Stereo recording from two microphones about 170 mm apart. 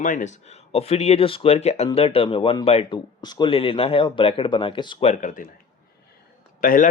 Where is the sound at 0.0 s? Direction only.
50° left (ahead or behind).